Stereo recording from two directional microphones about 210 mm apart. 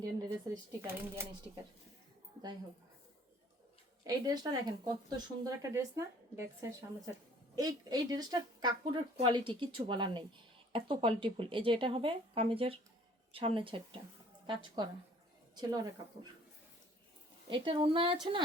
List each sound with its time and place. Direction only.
0.2 s speech: 20° right (ahead or behind)
4.1 s speech: 15° right (ahead or behind)
17.5 s speech: 25° right (ahead or behind)